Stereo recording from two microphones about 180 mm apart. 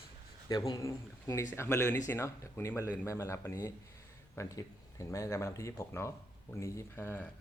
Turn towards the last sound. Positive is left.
turn(degrees=10)  # may be behind; listen again after turning